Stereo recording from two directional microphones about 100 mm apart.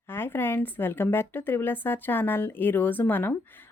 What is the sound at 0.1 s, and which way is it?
Speech, 20° left (ahead or behind).